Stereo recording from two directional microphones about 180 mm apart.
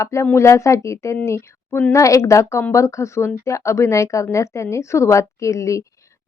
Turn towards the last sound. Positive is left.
turn(degrees=15)  # may be behind; listen again after turning